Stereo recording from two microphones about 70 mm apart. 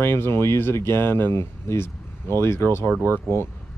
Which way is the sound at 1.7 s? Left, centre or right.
Left.